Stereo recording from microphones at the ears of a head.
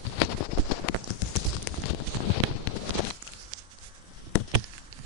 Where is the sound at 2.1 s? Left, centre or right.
Left.